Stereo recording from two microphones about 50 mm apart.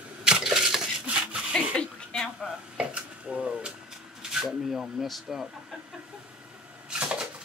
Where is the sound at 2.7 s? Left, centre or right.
Right.